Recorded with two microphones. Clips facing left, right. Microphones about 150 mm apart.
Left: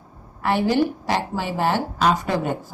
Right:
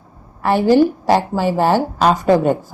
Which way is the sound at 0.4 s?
40° right (ahead or behind).